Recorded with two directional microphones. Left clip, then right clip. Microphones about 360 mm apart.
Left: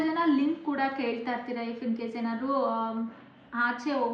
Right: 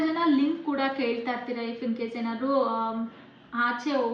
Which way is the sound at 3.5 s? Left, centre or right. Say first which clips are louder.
Right 2 dB; centre.